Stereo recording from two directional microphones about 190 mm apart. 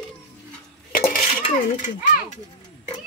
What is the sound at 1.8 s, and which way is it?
Speech, 45° left (ahead or behind).